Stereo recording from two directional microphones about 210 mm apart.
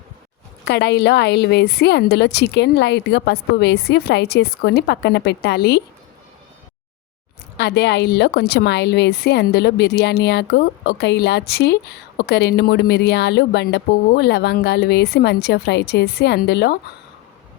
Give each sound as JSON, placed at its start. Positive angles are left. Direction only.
{"t": 0.6, "sound": "a woman's voice", "side_deg": 50}
{"t": 7.5, "sound": "a woman's voice", "side_deg": 55}